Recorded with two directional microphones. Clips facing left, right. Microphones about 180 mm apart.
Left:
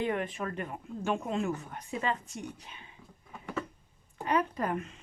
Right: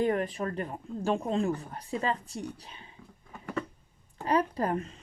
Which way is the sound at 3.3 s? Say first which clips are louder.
Right 2 dB; centre (ahead or behind).